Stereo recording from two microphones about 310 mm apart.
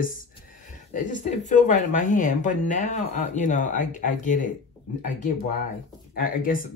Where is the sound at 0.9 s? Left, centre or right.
Left.